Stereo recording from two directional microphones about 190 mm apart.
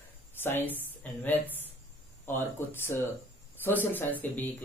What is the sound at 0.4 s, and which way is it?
Speech, 10° left (ahead or behind).